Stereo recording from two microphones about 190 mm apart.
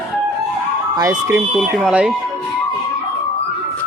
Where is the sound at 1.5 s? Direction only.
5° right (ahead or behind).